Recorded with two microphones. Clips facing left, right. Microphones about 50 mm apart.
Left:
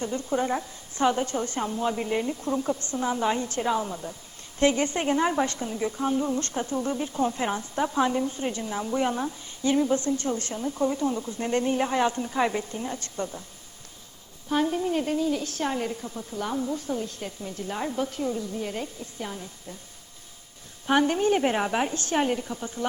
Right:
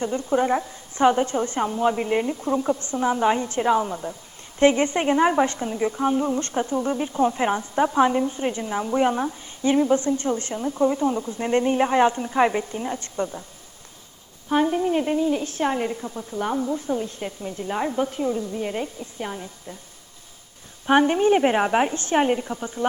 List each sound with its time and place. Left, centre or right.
0.0 s a woman's voice: right
14.5 s a woman's voice: right
20.8 s a woman's voice: right